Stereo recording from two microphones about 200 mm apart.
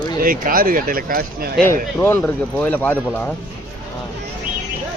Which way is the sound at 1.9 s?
10° left (ahead or behind).